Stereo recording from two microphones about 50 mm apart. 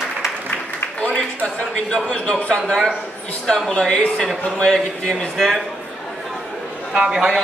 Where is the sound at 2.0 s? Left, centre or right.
Left.